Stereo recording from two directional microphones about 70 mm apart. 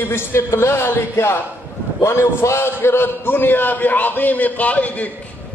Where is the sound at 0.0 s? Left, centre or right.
Left.